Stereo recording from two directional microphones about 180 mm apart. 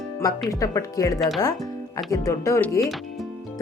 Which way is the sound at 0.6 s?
20° left (ahead or behind).